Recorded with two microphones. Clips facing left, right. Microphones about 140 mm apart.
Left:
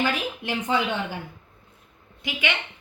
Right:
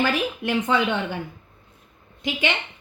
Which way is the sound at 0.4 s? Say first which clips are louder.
Right 3 dB; 60° right (ahead or behind).